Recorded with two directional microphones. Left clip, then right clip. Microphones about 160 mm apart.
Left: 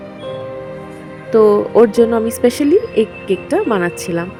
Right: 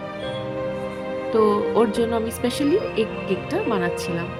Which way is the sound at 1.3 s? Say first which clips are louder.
Left 9 dB; 55° left (ahead or behind).